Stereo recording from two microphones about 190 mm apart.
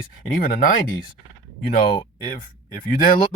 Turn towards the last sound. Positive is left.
turn(degrees=50)  # may be behind; listen again after turning